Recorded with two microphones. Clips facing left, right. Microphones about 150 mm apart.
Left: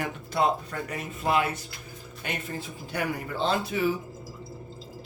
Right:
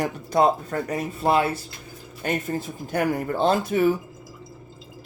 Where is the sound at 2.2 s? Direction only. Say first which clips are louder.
Right 8 dB; 45° right (ahead or behind).